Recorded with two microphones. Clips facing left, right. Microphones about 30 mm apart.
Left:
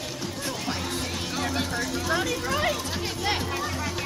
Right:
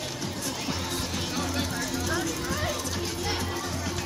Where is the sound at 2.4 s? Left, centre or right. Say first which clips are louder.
Left 5 dB; left.